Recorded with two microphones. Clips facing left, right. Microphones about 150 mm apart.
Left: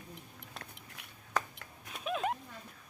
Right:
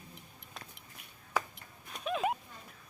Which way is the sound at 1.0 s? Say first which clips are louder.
Left 2 dB; 75° left (ahead or behind).